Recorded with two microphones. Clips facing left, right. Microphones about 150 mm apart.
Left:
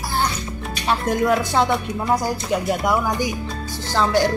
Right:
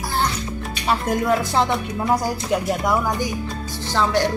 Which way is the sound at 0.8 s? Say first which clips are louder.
Left 1 dB; 5° right (ahead or behind).